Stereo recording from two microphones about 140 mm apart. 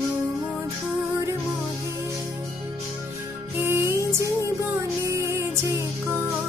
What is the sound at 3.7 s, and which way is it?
Music, 20° right (ahead or behind).